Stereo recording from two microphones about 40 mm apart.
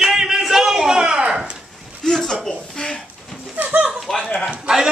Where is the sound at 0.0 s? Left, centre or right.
Centre.